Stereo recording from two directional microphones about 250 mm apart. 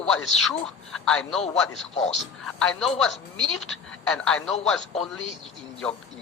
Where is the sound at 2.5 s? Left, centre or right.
Centre.